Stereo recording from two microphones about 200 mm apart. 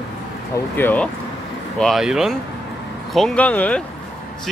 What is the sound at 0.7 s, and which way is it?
Speech, 10° left (ahead or behind).